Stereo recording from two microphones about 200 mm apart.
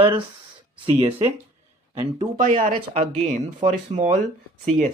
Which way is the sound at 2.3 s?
40° right (ahead or behind).